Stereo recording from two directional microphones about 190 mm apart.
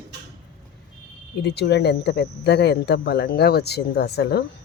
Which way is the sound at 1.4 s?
60° left (ahead or behind).